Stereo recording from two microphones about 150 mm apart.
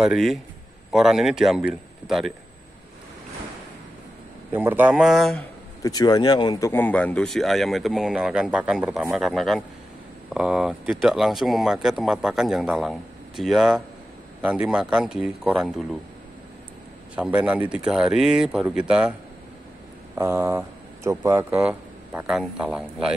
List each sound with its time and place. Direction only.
0.0 s speech: centre (ahead or behind)
4.5 s speech: 15° right (ahead or behind)
5.8 s speech: 25° left (ahead or behind)
6.7 s speech: 10° left (ahead or behind); by 16.0 s 5° right (ahead or behind)
17.1 s speech: 10° right (ahead or behind)
20.2 s speech: 20° right (ahead or behind)